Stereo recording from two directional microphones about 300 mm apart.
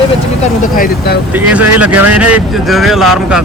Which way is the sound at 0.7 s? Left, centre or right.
Left.